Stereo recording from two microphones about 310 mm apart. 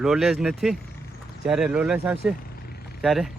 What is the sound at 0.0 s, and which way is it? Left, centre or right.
Speech, centre.